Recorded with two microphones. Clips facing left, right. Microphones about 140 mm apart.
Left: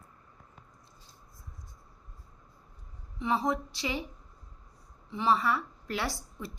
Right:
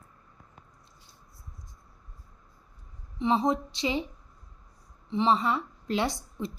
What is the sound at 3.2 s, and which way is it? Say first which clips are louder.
Speech: right 4 dB; 20° right (ahead or behind).